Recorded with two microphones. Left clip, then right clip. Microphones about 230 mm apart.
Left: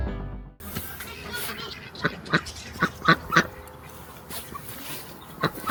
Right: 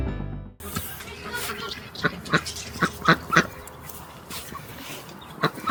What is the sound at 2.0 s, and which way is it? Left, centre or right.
Speech, left.